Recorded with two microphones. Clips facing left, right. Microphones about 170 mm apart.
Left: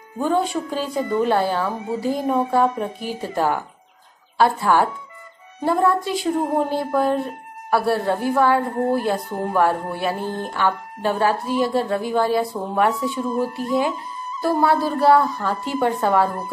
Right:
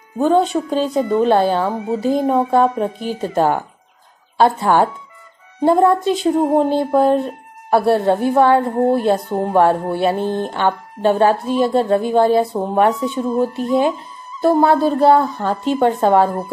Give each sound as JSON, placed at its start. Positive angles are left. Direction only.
{"t": 0.2, "sound": "speech", "side_deg": -25}